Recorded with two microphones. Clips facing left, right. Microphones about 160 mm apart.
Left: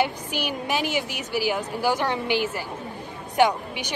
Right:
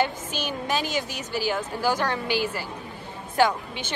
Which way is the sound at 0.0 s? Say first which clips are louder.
Left 1 dB; 15° left (ahead or behind).